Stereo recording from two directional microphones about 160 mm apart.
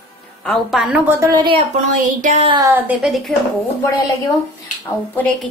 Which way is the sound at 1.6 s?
50° right (ahead or behind).